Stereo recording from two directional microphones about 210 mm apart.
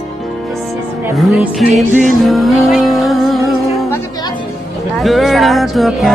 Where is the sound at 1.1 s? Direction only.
Centre (ahead or behind).